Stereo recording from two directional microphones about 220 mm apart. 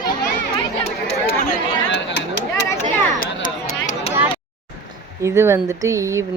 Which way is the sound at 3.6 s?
35° left (ahead or behind).